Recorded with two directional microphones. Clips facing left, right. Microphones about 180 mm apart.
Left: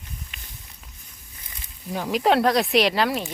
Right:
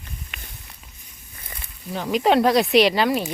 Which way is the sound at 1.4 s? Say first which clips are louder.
Right 7 dB; 60° right (ahead or behind).